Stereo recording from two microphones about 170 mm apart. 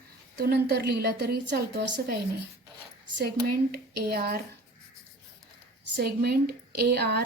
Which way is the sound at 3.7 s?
65° right (ahead or behind).